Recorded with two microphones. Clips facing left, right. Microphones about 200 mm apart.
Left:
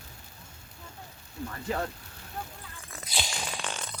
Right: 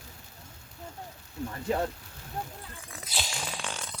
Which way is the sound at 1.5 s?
15° right (ahead or behind).